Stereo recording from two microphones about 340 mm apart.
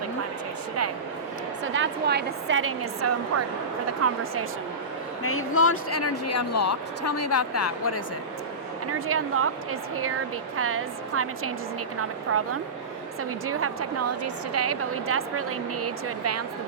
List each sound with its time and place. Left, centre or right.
1.6 s a woman's voice: right
5.2 s speech: left
8.9 s a woman's voice: right
10.6 s a woman's voice: right